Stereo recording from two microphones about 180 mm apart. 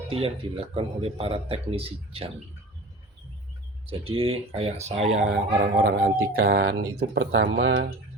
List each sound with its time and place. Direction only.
0.1 s speech: 30° right (ahead or behind)
3.8 s speech: 30° right (ahead or behind)
5.3 s speech: 60° right (ahead or behind); by 7.9 s 75° right (ahead or behind)